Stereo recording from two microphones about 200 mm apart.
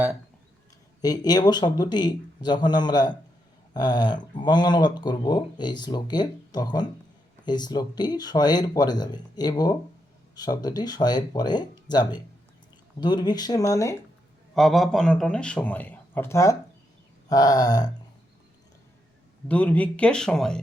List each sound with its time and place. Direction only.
1.0 s speech: 20° left (ahead or behind)
14.5 s a man's voice: centre (ahead or behind); by 17.9 s 20° left (ahead or behind)
19.5 s a man's voice: 5° left (ahead or behind)